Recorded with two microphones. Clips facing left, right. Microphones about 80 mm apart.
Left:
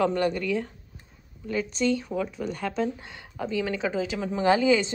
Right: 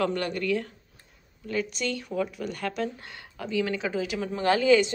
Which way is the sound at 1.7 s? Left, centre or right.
Left.